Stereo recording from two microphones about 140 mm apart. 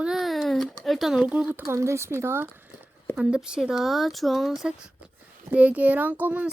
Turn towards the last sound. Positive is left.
turn(degrees=-10)  # may be behind; listen again after turning